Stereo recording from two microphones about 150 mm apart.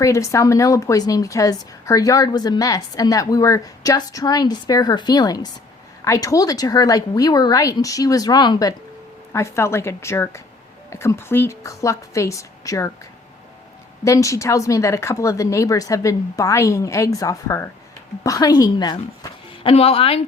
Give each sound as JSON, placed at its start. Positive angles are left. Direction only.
{"t": 0.0, "sound": "a woman's voice", "side_deg": 20}
{"t": 14.0, "sound": "a woman's voice", "side_deg": 20}
{"t": 19.7, "sound": "speech", "side_deg": 40}